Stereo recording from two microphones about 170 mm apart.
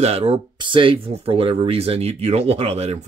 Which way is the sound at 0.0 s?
35° right (ahead or behind).